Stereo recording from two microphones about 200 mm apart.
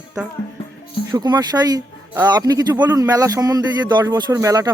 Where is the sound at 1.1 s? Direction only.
20° right (ahead or behind).